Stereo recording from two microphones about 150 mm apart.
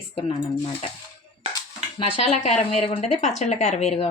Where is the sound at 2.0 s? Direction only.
40° left (ahead or behind).